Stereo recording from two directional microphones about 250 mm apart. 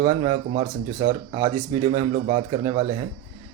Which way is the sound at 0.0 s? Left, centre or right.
Centre.